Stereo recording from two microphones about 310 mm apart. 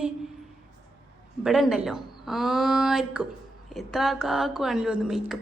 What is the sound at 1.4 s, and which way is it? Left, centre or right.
A woman's voice, centre.